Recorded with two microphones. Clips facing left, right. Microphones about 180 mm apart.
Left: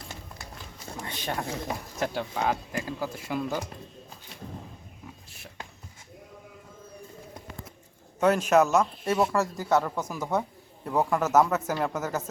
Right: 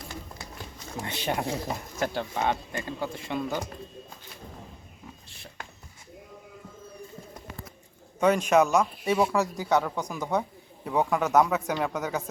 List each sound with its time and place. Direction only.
1.0 s speech: 15° right (ahead or behind)
1.6 s a man's voice: centre (ahead or behind)
8.2 s speech: centre (ahead or behind)